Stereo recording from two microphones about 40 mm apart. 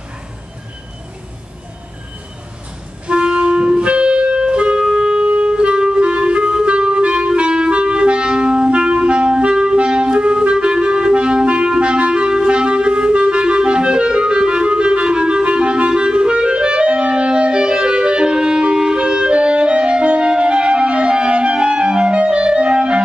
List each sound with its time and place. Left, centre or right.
3.1 s clarinet: right